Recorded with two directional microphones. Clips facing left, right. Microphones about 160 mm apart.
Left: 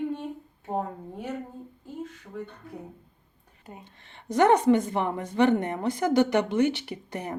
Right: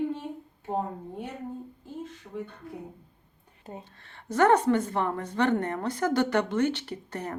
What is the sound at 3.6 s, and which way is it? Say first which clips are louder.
Speech: right 4 dB; 30° right (ahead or behind).